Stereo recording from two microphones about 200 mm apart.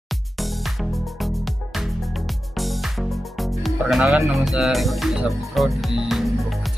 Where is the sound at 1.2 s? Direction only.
Centre (ahead or behind).